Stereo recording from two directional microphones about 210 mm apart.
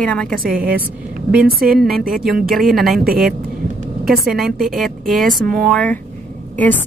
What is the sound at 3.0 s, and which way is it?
Speech, 45° right (ahead or behind).